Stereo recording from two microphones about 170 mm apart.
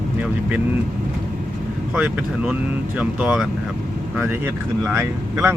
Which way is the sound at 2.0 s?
5° right (ahead or behind).